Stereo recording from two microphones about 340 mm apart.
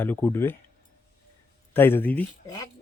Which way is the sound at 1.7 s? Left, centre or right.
Centre.